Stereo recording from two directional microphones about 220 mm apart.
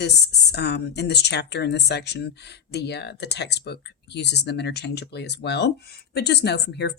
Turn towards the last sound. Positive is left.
turn(degrees=50)  # may be behind; listen again after turning